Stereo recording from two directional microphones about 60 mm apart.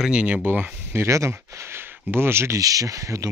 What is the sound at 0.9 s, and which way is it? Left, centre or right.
Speech, right.